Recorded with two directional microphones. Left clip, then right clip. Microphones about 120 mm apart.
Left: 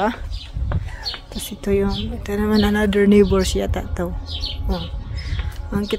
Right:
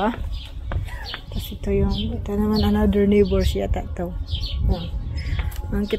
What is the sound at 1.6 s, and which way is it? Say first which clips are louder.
Speech: left 4 dB; 30° left (ahead or behind).